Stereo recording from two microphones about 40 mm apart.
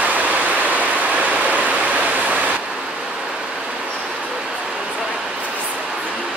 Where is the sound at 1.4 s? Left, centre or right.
Right.